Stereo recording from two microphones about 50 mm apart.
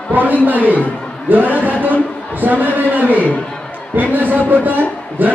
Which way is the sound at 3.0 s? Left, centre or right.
Left.